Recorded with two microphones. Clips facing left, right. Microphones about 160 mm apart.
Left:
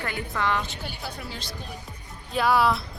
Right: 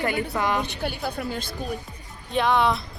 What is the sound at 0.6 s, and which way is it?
Speech, 60° right (ahead or behind).